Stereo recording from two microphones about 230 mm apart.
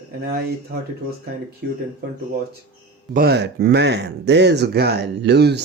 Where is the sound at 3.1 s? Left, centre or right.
Right.